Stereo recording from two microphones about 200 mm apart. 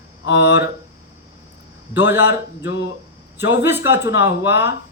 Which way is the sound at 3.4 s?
10° right (ahead or behind).